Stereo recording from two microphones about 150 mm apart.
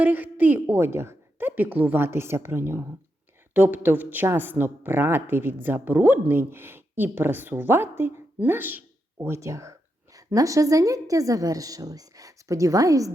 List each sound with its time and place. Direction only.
0.0 s a woman's voice: 10° right (ahead or behind)